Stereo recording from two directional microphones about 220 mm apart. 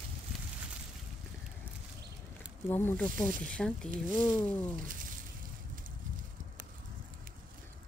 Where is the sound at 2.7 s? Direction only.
10° left (ahead or behind).